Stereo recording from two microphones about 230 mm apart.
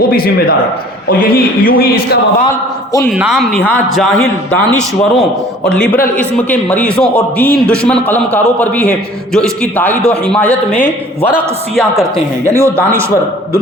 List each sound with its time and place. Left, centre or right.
0.1 s a man's voice: left
3.1 s a man's voice: centre
12.5 s a man's voice: centre